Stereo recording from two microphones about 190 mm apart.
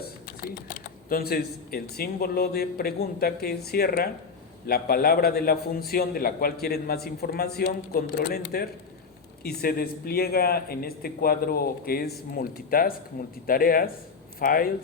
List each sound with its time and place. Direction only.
1.1 s a man's voice: 55° left (ahead or behind)
9.4 s a man's voice: 55° left (ahead or behind)